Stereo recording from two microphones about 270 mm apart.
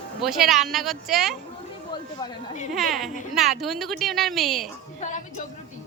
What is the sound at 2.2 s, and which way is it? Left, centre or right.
Speech, left.